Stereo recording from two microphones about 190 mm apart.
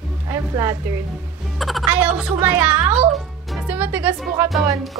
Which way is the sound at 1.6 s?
Centre (ahead or behind).